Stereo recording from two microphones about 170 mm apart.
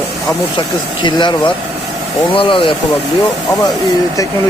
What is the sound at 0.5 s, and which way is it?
Speech, 30° left (ahead or behind).